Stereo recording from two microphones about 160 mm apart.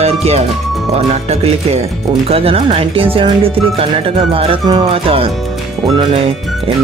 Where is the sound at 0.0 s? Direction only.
40° right (ahead or behind).